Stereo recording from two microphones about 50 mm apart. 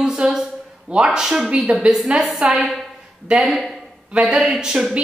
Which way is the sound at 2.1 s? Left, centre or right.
Centre.